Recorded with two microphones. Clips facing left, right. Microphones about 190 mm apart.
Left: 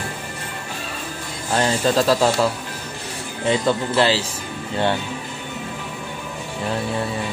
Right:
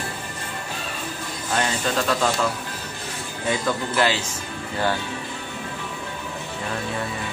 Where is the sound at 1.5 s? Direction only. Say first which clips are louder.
Left 5 dB; 35° left (ahead or behind).